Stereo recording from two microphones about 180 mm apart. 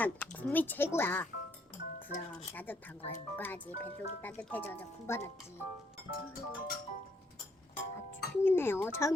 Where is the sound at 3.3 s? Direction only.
10° left (ahead or behind).